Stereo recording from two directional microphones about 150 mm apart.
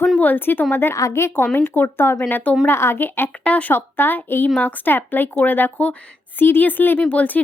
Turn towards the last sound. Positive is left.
turn(degrees=10)  # may be behind; listen again after turning